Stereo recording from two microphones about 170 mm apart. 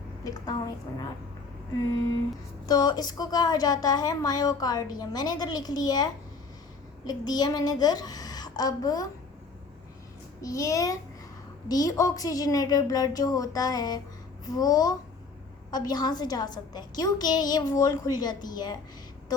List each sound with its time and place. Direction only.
0.3 s speech: 25° left (ahead or behind)
2.6 s speech: 25° left (ahead or behind)
10.4 s speech: 20° left (ahead or behind)